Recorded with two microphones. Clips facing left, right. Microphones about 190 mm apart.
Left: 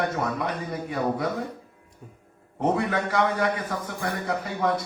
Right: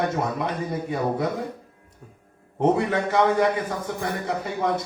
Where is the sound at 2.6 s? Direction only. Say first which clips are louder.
Right 3 dB; 25° right (ahead or behind).